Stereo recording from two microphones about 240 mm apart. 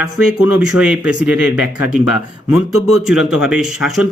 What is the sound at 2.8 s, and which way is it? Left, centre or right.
Speech, left.